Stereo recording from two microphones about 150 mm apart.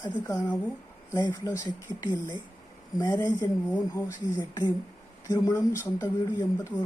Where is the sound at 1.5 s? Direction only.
25° left (ahead or behind).